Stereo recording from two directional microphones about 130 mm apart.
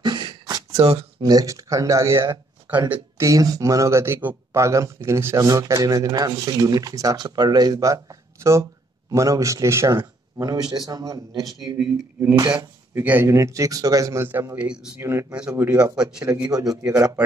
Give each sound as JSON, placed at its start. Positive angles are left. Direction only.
{"t": 0.0, "sound": "a sound", "side_deg": -35}
{"t": 1.2, "sound": "speech", "side_deg": -30}
{"t": 12.5, "sound": "speech", "side_deg": -10}
{"t": 15.0, "sound": "speech", "side_deg": -20}
{"t": 15.8, "sound": "a man's voice", "side_deg": -10}
{"t": 16.4, "sound": "speech", "side_deg": -30}